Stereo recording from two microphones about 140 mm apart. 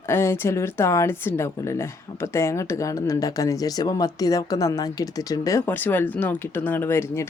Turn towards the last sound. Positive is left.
turn(degrees=20)  # may be behind; listen again after turning